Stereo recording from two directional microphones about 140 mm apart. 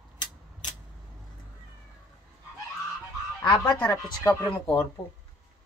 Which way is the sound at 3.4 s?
25° left (ahead or behind).